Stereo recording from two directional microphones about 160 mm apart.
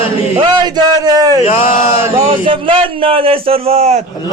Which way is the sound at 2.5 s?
35° right (ahead or behind).